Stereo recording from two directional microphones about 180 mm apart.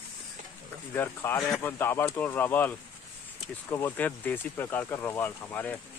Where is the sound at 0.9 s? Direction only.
10° left (ahead or behind).